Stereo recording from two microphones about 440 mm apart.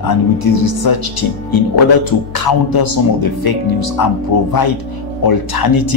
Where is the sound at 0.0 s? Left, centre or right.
Left.